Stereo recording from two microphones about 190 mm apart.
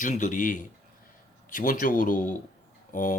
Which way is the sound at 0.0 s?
40° left (ahead or behind).